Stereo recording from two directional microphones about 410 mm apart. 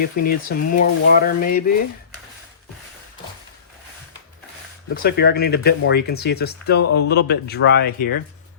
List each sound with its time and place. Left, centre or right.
0.0 s speech: left
5.0 s speech: left